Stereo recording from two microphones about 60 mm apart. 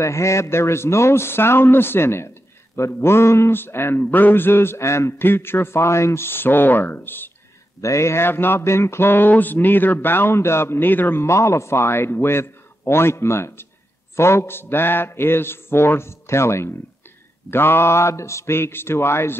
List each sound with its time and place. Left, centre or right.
0.0 s speech: left
5.2 s speech: left
7.8 s speech: left
11.2 s speech: left